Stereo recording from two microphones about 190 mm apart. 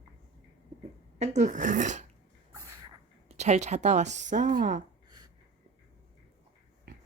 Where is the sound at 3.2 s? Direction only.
35° right (ahead or behind).